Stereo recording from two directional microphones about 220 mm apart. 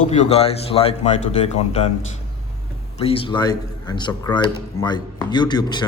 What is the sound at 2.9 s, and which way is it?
Speech, 25° left (ahead or behind).